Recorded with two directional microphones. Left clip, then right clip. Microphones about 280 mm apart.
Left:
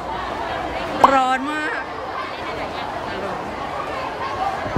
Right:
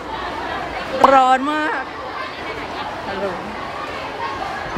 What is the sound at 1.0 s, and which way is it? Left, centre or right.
Speech, centre.